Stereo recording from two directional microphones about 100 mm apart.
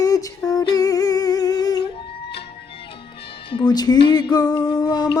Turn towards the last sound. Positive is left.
turn(degrees=45)  # may be behind; listen again after turning